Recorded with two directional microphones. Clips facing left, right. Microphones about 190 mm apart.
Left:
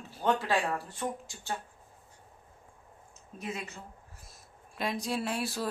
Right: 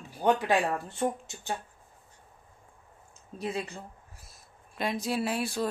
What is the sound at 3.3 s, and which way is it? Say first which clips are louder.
Speech: right 5 dB; 35° right (ahead or behind).